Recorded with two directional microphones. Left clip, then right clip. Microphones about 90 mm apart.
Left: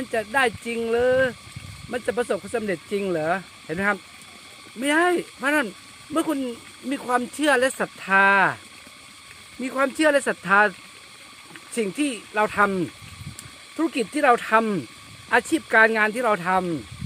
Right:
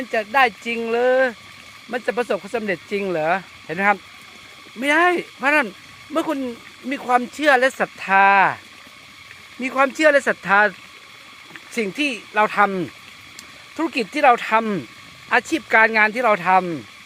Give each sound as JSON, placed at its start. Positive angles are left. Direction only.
{"t": 0.1, "sound": "speech", "side_deg": 45}
{"t": 9.6, "sound": "speech", "side_deg": 35}
{"t": 13.9, "sound": "speech", "side_deg": 40}